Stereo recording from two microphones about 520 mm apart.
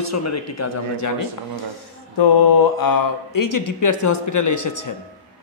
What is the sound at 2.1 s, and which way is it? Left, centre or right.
A man's voice, left.